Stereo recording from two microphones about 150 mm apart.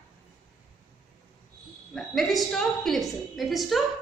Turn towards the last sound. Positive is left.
turn(degrees=0)  # may be behind; listen again after turning